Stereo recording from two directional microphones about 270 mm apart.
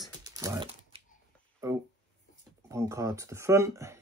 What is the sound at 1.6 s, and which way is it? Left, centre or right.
Speech, centre.